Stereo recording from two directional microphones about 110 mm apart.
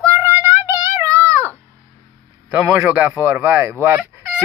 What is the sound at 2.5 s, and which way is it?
Speech, 25° right (ahead or behind).